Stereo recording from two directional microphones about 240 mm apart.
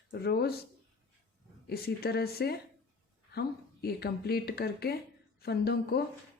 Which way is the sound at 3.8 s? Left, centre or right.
Left.